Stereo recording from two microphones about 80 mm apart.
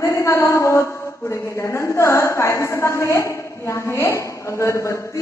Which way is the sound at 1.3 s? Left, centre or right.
Left.